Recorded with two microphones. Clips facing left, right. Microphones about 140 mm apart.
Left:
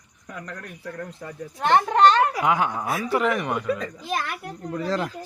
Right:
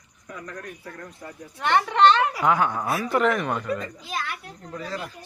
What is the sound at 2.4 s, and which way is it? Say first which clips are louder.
Speech: right 1 dB; 15° left (ahead or behind).